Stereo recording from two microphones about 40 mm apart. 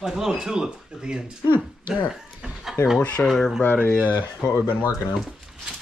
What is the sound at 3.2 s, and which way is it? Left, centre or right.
Speech, centre.